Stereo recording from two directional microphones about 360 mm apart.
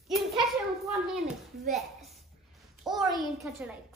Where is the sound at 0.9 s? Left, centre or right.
Centre.